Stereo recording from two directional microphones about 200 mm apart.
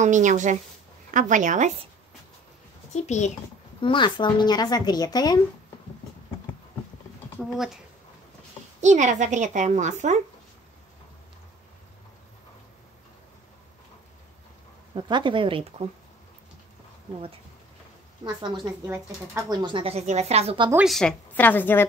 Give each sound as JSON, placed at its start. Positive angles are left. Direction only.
{"t": 0.0, "sound": "a woman's voice", "side_deg": -40}
{"t": 2.9, "sound": "a child's voice", "side_deg": 35}
{"t": 3.8, "sound": "speech", "side_deg": 25}
{"t": 7.4, "sound": "speech", "side_deg": 0}
{"t": 8.8, "sound": "a woman's voice", "side_deg": -35}
{"t": 15.0, "sound": "speech", "side_deg": -25}
{"t": 18.2, "sound": "speech", "side_deg": -20}
{"t": 20.7, "sound": "a woman's voice", "side_deg": 0}